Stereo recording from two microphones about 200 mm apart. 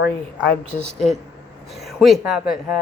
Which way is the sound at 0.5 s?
5° left (ahead or behind).